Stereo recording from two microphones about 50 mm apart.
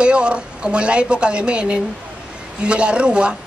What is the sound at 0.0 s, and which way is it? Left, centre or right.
A woman's voice, right.